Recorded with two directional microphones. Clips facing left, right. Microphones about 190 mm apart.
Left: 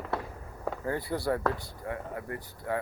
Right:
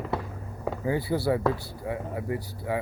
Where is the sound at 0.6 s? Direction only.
5° right (ahead or behind).